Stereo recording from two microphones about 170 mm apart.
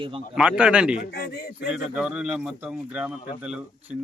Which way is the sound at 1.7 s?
5° right (ahead or behind).